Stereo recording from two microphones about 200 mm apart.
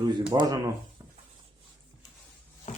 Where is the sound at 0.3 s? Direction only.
20° right (ahead or behind).